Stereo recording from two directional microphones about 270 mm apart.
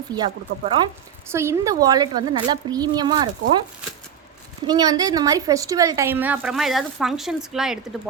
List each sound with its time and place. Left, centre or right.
0.1 s a woman's voice: centre
4.6 s a woman's voice: centre